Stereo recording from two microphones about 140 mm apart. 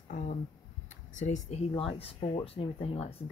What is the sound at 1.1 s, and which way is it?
Speech, 55° left (ahead or behind).